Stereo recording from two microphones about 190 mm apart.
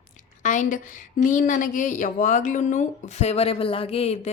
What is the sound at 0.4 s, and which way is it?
A woman's voice, 40° left (ahead or behind).